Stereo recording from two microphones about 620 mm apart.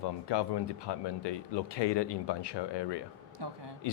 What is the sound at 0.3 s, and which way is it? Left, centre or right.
Speech, left.